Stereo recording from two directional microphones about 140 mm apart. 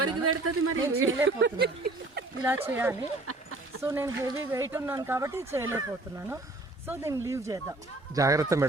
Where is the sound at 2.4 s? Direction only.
15° right (ahead or behind).